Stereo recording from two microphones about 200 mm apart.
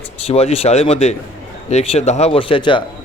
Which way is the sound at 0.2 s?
30° left (ahead or behind).